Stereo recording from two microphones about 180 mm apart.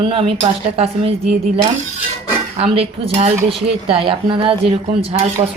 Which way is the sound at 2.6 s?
35° right (ahead or behind).